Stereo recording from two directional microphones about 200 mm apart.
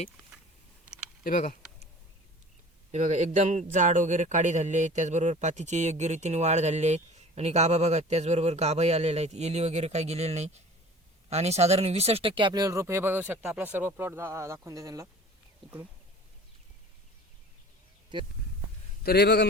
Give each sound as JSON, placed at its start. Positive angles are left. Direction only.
{"t": 1.2, "sound": "speech", "side_deg": 40}
{"t": 2.9, "sound": "a man's voice", "side_deg": -35}
{"t": 19.0, "sound": "a man's voice", "side_deg": 55}